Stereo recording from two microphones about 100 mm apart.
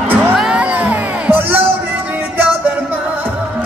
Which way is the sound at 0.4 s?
10° right (ahead or behind).